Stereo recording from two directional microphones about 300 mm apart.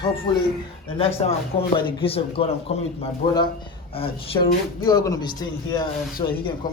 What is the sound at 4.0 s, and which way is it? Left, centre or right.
A man's voice, centre.